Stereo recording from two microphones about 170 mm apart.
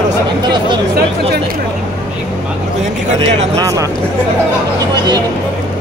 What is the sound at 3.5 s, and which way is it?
Speech, 20° right (ahead or behind).